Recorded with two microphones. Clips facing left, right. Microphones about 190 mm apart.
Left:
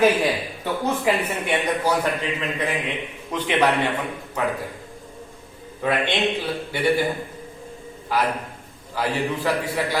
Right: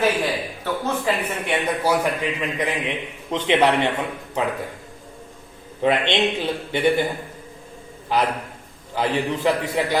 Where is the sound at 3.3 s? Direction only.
20° right (ahead or behind).